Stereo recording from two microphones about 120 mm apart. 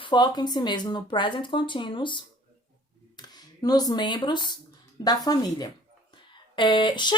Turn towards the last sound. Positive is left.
turn(degrees=40)  # may be behind; listen again after turning